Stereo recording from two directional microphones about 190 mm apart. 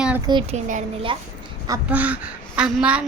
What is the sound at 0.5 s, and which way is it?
Speech, 40° right (ahead or behind).